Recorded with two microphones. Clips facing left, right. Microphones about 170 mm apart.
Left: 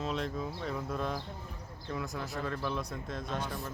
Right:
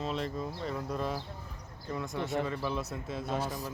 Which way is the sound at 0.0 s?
Centre (ahead or behind).